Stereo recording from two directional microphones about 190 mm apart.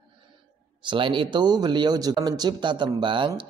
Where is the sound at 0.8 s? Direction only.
25° right (ahead or behind).